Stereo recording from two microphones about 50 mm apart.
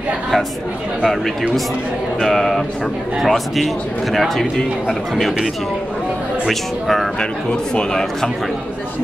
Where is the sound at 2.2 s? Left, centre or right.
Centre.